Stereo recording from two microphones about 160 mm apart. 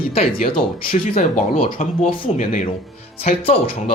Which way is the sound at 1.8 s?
55° left (ahead or behind).